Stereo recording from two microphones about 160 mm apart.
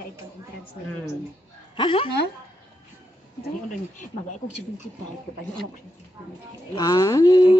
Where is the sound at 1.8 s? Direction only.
30° left (ahead or behind).